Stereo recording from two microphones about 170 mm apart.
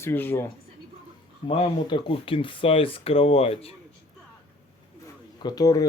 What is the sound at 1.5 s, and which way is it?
Speech, 30° left (ahead or behind).